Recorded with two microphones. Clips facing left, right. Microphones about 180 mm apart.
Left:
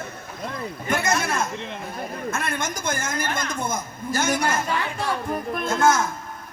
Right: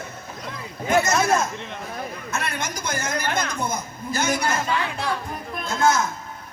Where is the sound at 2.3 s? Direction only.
50° left (ahead or behind).